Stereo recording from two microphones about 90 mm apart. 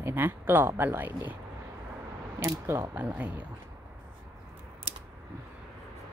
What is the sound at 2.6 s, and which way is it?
Speech, 30° right (ahead or behind).